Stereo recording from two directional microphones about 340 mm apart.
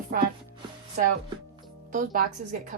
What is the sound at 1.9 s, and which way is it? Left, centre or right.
Speech, right.